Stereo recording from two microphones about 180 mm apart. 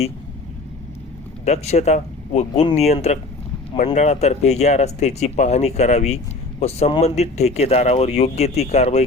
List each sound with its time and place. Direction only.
1.5 s speech: 40° left (ahead or behind)